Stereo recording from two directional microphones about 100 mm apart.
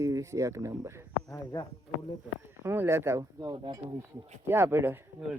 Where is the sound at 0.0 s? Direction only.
30° right (ahead or behind).